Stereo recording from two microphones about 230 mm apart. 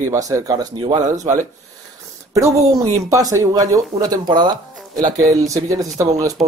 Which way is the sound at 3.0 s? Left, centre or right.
Centre.